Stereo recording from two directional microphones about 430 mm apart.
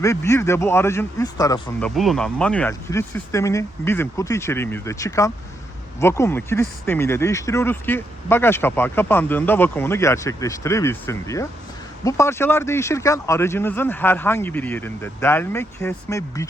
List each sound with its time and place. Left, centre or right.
0.0 s speech: centre